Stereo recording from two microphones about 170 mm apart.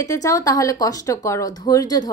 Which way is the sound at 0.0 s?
20° left (ahead or behind).